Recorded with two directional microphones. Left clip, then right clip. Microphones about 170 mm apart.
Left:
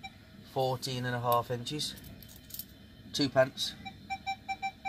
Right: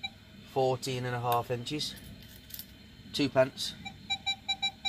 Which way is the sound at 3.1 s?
15° right (ahead or behind).